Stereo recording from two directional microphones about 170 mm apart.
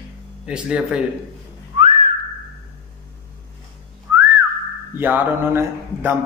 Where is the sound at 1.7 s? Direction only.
35° right (ahead or behind).